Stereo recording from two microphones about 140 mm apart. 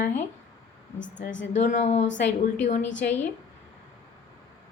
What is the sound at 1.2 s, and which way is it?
Speech, 60° left (ahead or behind).